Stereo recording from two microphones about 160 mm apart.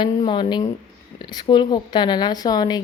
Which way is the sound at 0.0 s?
30° left (ahead or behind).